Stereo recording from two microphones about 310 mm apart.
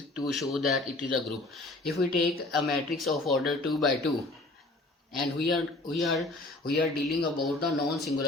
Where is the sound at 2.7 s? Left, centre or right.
Centre.